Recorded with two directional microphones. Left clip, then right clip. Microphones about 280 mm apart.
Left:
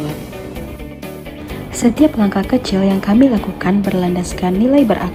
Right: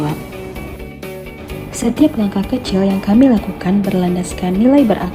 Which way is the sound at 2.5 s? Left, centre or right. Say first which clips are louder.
Left 3 dB; centre.